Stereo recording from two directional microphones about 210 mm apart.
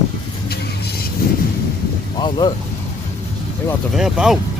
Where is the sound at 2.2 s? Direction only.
20° left (ahead or behind).